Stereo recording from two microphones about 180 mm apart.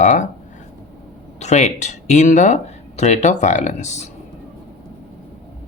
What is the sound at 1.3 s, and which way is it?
Speech, 40° left (ahead or behind).